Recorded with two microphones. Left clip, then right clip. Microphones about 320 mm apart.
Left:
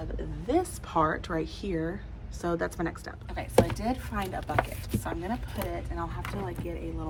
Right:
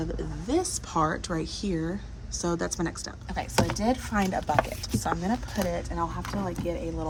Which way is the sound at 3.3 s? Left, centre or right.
Right.